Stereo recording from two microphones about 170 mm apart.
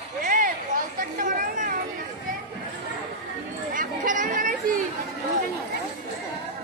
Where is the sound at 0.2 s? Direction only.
55° right (ahead or behind).